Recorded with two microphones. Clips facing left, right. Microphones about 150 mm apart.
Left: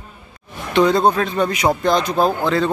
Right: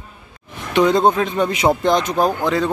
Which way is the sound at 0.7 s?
20° right (ahead or behind).